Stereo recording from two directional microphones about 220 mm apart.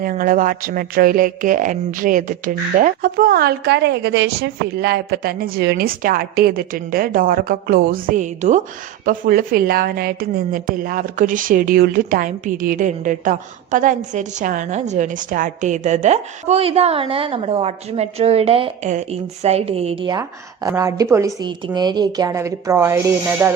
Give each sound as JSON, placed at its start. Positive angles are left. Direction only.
{"t": 0.0, "sound": "a woman's voice", "side_deg": -40}